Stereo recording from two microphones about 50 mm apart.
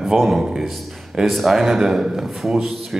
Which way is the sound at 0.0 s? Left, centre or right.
Centre.